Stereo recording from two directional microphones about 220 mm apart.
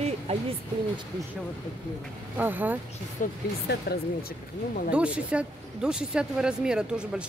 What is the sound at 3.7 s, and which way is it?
Speech, 45° left (ahead or behind).